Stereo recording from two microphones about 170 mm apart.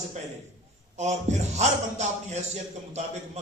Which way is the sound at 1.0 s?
45° right (ahead or behind).